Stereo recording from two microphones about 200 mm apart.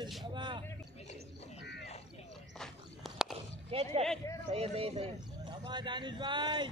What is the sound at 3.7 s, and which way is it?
Speech, 30° right (ahead or behind).